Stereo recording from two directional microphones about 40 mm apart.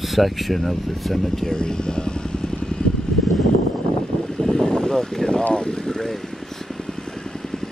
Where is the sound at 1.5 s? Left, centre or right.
Centre.